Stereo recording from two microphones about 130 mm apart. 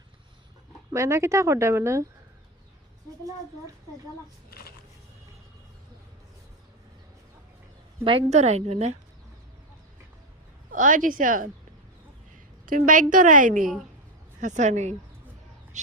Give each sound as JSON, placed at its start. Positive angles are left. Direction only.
{"t": 0.9, "sound": "speech", "side_deg": -20}
{"t": 8.3, "sound": "a woman's voice", "side_deg": -60}
{"t": 10.7, "sound": "a woman's voice", "side_deg": -90}
{"t": 12.6, "sound": "a woman's voice", "side_deg": -90}
{"t": 14.4, "sound": "a woman's voice", "side_deg": -65}